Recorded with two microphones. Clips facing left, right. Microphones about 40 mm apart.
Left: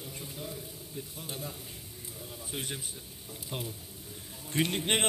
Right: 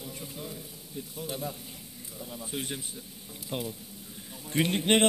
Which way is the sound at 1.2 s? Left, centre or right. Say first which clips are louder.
Right 7 dB; right.